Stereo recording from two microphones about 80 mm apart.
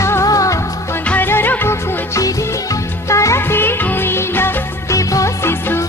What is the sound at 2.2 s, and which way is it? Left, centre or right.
Music, left.